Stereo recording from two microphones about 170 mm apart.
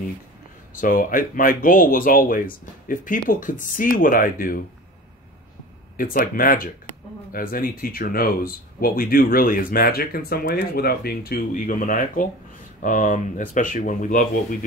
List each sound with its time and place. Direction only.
0.7 s speech: 55° left (ahead or behind)
5.9 s speech: 55° left (ahead or behind)